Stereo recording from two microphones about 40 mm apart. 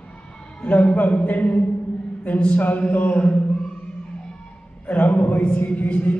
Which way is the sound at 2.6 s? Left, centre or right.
Left.